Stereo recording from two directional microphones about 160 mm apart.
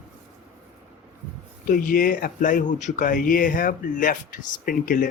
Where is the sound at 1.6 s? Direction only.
60° left (ahead or behind).